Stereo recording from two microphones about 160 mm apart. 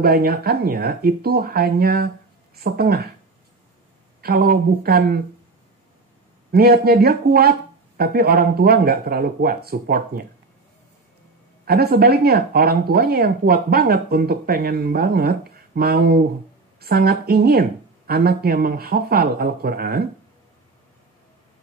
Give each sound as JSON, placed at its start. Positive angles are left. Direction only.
{"t": 0.0, "sound": "speech", "side_deg": -75}
{"t": 4.2, "sound": "speech", "side_deg": -70}
{"t": 6.5, "sound": "speech", "side_deg": -75}
{"t": 11.6, "sound": "speech", "side_deg": -70}